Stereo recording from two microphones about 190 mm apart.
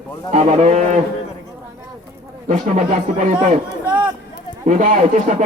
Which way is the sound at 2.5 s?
40° right (ahead or behind).